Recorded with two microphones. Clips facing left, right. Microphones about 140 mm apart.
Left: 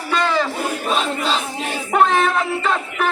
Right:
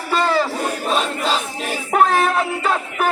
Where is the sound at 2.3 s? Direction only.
5° right (ahead or behind).